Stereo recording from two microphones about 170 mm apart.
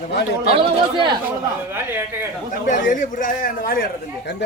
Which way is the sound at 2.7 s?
50° left (ahead or behind).